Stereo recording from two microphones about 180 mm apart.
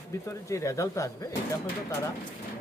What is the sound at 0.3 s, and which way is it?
Speech, 15° left (ahead or behind).